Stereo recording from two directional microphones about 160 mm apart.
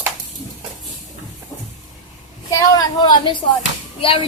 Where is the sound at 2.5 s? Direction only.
20° left (ahead or behind).